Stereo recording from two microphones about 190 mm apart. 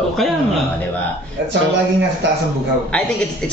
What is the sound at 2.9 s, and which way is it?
Speech, 5° left (ahead or behind).